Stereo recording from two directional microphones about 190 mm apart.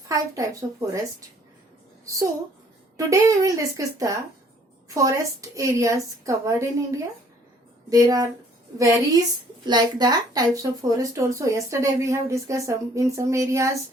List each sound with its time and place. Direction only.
0.1 s a woman's voice: 15° right (ahead or behind)
3.1 s a woman's voice: 15° right (ahead or behind)